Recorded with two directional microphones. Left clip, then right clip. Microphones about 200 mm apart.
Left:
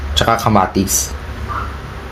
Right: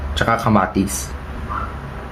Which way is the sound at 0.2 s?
20° left (ahead or behind).